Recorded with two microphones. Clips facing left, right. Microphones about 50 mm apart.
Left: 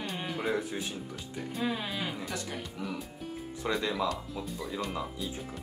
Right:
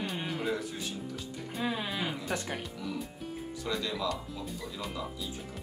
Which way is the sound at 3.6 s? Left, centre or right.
Left.